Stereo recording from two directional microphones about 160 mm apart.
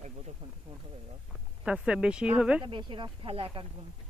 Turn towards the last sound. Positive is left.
turn(degrees=-35)  # may be behind; listen again after turning